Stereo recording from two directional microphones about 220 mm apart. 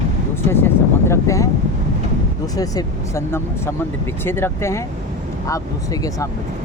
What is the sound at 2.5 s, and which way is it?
Speech, 15° left (ahead or behind).